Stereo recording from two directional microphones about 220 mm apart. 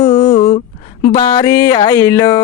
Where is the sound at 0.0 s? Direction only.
20° left (ahead or behind).